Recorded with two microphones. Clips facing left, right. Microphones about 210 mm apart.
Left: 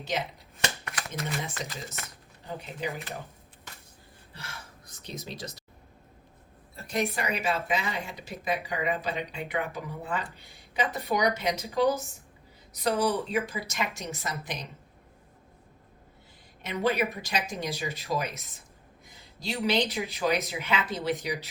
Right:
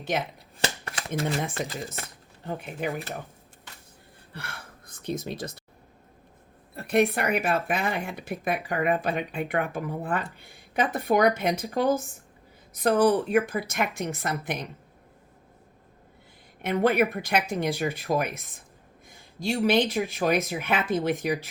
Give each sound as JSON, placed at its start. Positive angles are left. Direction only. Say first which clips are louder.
{"t": 0.6, "sound": "shuffling cards", "louder": "right 3 dB", "side_deg": -30}
{"t": 1.6, "sound": "speech", "louder": "right 6 dB", "side_deg": -55}
{"t": 2.0, "sound": "speech", "louder": "right 4 dB", "side_deg": -30}
{"t": 2.5, "sound": "speech", "louder": "right 4 dB", "side_deg": -55}
{"t": 4.3, "sound": "speech", "louder": "right 4 dB", "side_deg": -55}
{"t": 6.7, "sound": "speech", "louder": "right 7 dB", "side_deg": -60}
{"t": 16.6, "sound": "speech", "louder": "right 5 dB", "side_deg": -55}